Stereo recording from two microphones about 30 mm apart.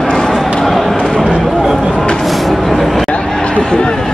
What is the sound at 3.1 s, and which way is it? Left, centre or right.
Chatter, left.